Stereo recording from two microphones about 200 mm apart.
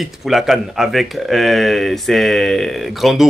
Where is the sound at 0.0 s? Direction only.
Centre (ahead or behind).